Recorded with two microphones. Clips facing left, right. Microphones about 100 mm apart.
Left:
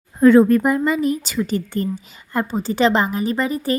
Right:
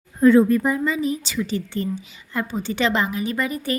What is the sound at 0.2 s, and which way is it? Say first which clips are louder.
A woman's voice: left 3 dB; 70° left (ahead or behind).